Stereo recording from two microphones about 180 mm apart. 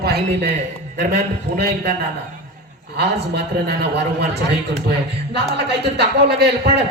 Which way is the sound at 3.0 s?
70° right (ahead or behind).